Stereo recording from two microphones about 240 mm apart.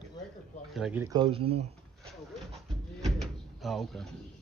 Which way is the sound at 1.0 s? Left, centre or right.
Centre.